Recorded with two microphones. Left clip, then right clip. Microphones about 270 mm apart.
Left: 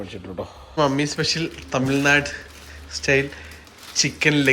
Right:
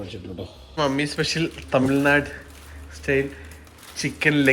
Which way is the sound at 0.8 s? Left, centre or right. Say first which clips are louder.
Left 2 dB; centre.